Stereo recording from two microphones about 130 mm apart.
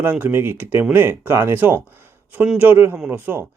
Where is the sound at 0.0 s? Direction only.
15° right (ahead or behind).